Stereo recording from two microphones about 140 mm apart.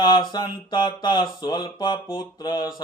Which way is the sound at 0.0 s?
30° left (ahead or behind).